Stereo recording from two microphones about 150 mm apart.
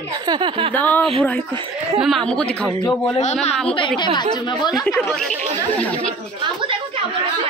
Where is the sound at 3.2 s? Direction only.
50° left (ahead or behind).